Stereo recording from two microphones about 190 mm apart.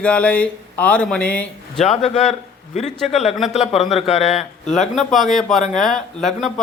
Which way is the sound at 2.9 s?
Centre (ahead or behind).